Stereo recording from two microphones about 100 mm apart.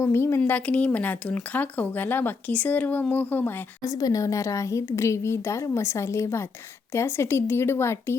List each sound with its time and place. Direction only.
0.0 s speech: 25° left (ahead or behind)
3.8 s a woman's voice: 35° left (ahead or behind)